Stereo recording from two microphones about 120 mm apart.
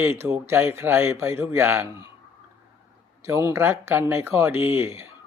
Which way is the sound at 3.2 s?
25° right (ahead or behind).